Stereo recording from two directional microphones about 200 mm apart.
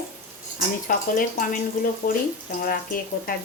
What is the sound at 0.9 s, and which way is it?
Speech, 40° left (ahead or behind).